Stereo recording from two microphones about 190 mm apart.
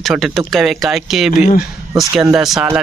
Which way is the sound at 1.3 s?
40° left (ahead or behind).